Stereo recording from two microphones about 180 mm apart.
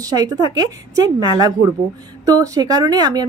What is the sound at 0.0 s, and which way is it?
A woman's voice, 20° right (ahead or behind).